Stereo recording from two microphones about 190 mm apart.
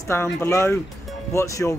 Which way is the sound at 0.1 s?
15° left (ahead or behind).